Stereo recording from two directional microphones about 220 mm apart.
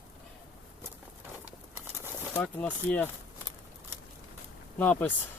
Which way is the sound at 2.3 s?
10° left (ahead or behind).